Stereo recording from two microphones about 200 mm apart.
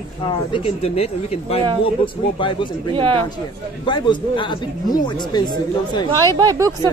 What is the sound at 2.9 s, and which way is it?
Speech, 25° right (ahead or behind).